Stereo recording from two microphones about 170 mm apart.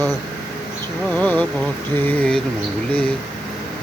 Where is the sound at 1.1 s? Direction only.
10° left (ahead or behind).